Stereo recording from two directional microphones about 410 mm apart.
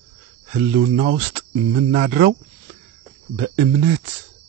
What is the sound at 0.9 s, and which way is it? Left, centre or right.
Speech, right.